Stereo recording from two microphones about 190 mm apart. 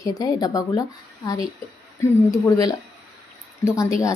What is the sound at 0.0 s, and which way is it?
A woman's voice, 20° left (ahead or behind).